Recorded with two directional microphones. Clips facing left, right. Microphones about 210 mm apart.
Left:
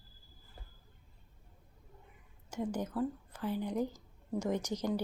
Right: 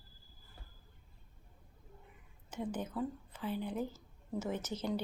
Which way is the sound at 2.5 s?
10° left (ahead or behind).